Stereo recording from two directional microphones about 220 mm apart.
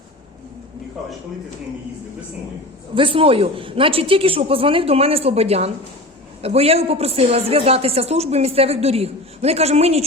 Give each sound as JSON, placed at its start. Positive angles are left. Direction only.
{"t": 2.9, "sound": "a man's voice", "side_deg": -25}